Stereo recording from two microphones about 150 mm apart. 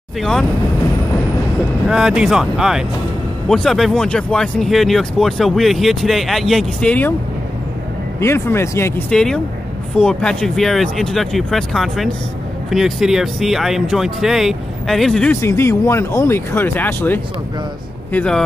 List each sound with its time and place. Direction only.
0.2 s speech: 5° left (ahead or behind)
1.9 s speech: 5° right (ahead or behind)
8.2 s speech: 15° left (ahead or behind)
9.1 s speech: 5° left (ahead or behind)
15.4 s speech: 15° left (ahead or behind)